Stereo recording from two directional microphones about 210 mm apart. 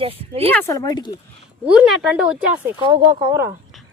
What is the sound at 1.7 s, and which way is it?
Speech, 5° right (ahead or behind).